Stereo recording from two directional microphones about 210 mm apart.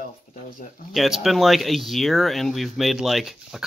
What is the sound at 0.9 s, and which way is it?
Speech, centre (ahead or behind).